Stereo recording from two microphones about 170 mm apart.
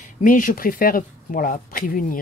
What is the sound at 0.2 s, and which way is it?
Speech, 50° left (ahead or behind).